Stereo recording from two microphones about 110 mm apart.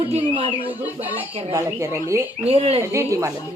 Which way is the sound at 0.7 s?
15° right (ahead or behind).